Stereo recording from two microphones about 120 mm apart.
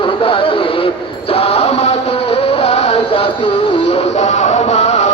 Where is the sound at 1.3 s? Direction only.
55° left (ahead or behind).